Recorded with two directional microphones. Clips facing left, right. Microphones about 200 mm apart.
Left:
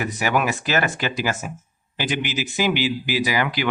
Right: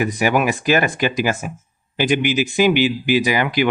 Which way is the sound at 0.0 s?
15° right (ahead or behind).